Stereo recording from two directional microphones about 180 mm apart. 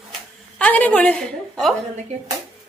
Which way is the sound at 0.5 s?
10° left (ahead or behind).